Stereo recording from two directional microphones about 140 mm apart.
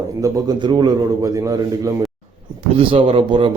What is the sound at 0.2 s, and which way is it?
A man's voice, 30° right (ahead or behind).